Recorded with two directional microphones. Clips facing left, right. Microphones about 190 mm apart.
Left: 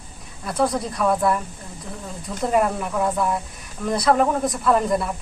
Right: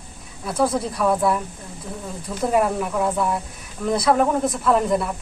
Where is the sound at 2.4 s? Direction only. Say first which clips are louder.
Right 1 dB; centre (ahead or behind).